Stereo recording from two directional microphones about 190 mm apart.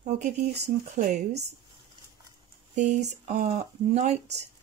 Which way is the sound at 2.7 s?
40° right (ahead or behind).